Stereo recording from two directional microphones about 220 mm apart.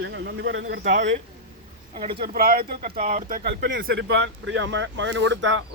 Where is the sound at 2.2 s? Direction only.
40° right (ahead or behind).